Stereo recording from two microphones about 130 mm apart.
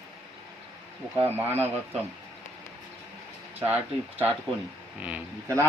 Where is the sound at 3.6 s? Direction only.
15° right (ahead or behind).